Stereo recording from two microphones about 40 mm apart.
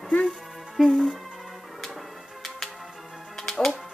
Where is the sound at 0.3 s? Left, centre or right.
Centre.